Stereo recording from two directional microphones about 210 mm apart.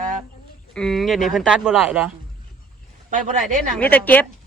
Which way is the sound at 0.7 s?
5° left (ahead or behind).